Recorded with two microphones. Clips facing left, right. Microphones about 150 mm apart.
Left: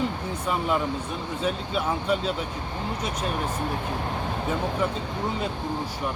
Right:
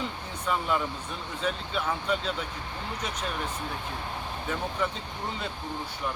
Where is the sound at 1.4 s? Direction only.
10° left (ahead or behind).